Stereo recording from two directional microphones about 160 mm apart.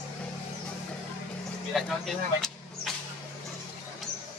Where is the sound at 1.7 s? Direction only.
Centre (ahead or behind).